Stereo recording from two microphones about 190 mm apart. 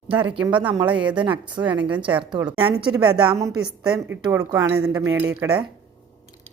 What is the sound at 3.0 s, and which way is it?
Speech, 10° right (ahead or behind).